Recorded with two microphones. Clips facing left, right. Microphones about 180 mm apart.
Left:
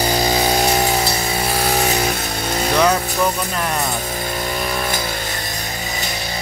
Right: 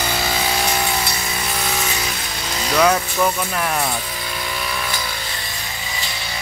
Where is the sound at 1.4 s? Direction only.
40° left (ahead or behind).